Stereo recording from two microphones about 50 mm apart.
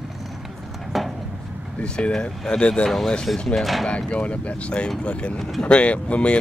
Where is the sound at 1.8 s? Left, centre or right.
Centre.